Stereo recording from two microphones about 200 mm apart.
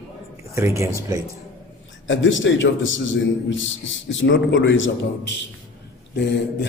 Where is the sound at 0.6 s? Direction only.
15° right (ahead or behind).